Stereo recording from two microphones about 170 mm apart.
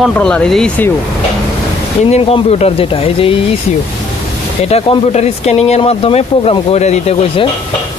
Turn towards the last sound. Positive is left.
turn(degrees=40)  # may be behind; listen again after turning